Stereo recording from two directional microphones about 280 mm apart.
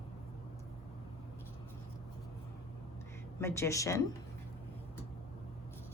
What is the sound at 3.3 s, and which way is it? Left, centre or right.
Speech, centre.